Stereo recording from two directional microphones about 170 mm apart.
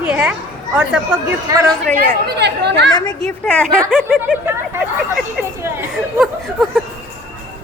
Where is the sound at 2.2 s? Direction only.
80° right.